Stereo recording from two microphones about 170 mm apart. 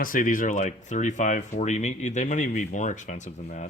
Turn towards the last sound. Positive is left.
turn(degrees=45)  # may be behind; listen again after turning